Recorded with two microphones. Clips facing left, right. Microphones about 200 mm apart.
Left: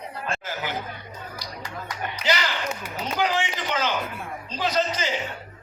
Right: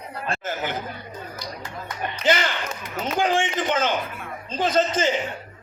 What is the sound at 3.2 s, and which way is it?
A man's voice, 50° right (ahead or behind).